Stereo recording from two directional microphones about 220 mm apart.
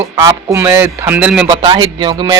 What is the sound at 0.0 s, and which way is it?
Speech, 10° right (ahead or behind).